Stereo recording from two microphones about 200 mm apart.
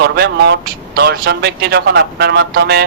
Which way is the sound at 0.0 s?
55° right (ahead or behind).